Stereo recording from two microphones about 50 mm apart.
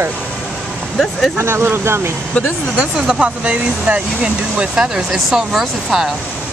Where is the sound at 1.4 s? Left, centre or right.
Right.